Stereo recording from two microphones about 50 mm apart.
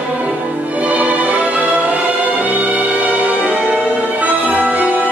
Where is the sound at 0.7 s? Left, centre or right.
Right.